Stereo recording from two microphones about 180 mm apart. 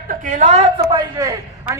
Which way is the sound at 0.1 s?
45° right (ahead or behind).